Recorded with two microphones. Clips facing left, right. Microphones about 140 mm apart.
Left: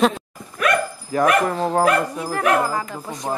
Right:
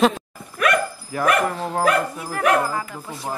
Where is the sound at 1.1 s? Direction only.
35° left (ahead or behind).